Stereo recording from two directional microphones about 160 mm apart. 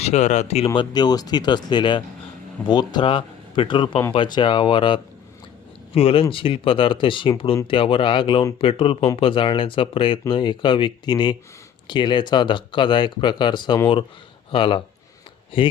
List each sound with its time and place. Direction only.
0.0 s speech: 45° left (ahead or behind)